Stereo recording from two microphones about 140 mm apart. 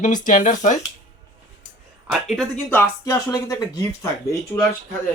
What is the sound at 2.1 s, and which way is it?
Speech, centre (ahead or behind).